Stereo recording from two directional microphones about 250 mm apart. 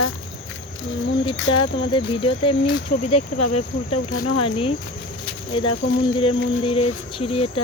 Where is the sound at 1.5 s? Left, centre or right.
Centre.